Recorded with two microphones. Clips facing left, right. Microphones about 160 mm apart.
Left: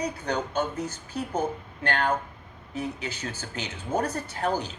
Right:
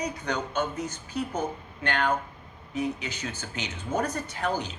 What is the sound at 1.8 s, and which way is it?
A man's voice, 35° left (ahead or behind).